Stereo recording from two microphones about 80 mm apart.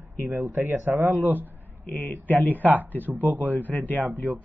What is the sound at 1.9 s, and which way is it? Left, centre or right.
Speech, left.